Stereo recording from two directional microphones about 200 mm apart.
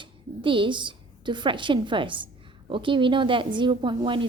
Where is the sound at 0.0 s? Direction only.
25° right (ahead or behind).